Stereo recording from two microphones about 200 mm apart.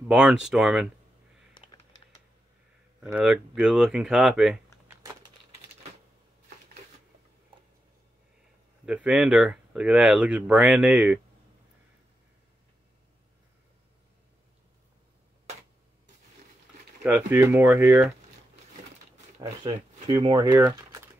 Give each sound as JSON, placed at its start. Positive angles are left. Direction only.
{"t": 0.1, "sound": "speech", "side_deg": -5}
{"t": 1.5, "sound": "computer keyboard", "side_deg": 25}
{"t": 3.0, "sound": "speech", "side_deg": -5}
{"t": 4.8, "sound": "a sound", "side_deg": -15}
{"t": 8.8, "sound": "speech", "side_deg": -5}
{"t": 17.0, "sound": "speech", "side_deg": -10}
{"t": 19.6, "sound": "speech", "side_deg": -20}